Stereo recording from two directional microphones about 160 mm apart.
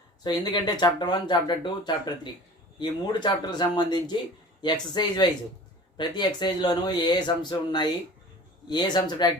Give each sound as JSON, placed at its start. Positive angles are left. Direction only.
{"t": 0.2, "sound": "speech", "side_deg": 25}